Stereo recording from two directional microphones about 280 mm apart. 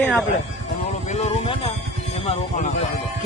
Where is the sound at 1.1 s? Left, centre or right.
Left.